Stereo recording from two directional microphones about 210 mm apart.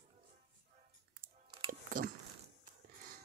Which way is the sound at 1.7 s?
40° right (ahead or behind).